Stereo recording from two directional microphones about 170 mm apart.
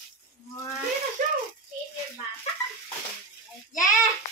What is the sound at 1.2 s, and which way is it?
Rattle, 50° right (ahead or behind).